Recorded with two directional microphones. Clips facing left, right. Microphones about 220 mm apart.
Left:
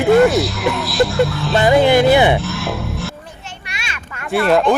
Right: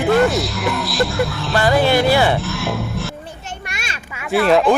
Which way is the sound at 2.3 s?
Centre (ahead or behind).